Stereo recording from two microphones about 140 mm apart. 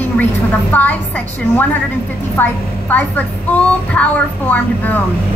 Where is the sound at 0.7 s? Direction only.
10° left (ahead or behind).